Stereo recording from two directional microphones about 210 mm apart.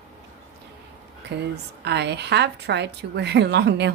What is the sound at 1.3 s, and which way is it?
A woman's voice, 55° right (ahead or behind).